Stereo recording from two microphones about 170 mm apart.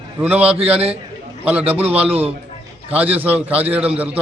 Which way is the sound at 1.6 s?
35° right (ahead or behind).